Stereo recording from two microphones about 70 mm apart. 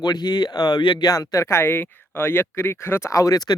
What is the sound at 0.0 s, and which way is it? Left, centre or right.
Speech, left.